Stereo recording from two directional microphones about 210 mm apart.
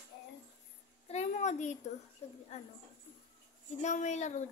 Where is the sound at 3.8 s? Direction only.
35° left (ahead or behind).